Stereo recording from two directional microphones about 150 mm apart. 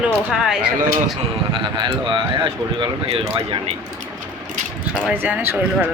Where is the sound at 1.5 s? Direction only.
30° right (ahead or behind).